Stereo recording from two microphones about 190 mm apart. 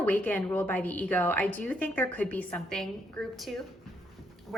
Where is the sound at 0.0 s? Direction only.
10° left (ahead or behind).